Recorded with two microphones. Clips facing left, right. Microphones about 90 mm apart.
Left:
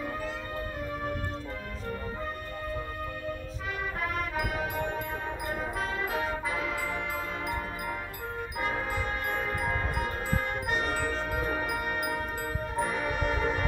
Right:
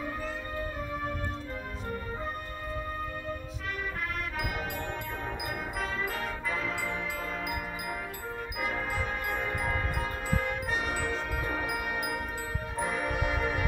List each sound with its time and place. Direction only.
4.4 s music: 5° left (ahead or behind)
8.5 s music: centre (ahead or behind)
12.8 s music: 5° right (ahead or behind)